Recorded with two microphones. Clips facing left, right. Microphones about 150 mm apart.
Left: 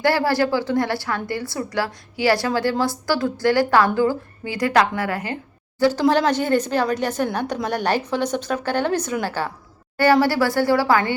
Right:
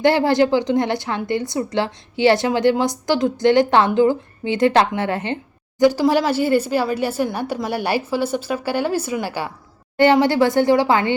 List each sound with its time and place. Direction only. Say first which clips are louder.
0.0 s a woman's voice: right 4 dB; 20° right (ahead or behind)
5.8 s a woman's voice: right 2 dB; 10° right (ahead or behind)